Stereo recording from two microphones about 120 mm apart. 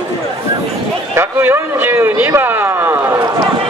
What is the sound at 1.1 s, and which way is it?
A man's voice, 20° right (ahead or behind).